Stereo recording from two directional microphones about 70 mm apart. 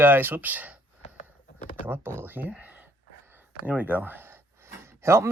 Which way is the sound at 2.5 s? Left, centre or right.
Right.